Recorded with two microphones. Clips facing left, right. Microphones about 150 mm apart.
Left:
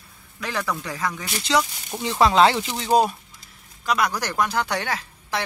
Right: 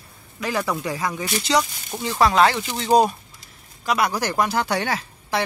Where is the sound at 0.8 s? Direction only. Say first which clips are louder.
Right 3 dB; 10° right (ahead or behind).